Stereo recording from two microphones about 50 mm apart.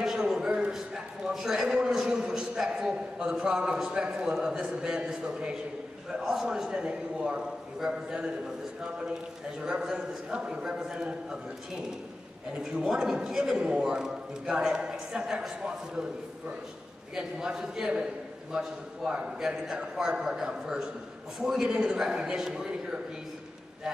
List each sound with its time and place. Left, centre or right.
0.0 s a sound: centre
0.7 s a man's voice: centre
9.6 s a man's voice: centre
12.5 s a man's voice: centre